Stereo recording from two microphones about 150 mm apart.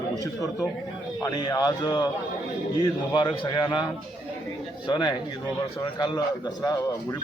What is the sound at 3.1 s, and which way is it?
Speech, 30° left (ahead or behind).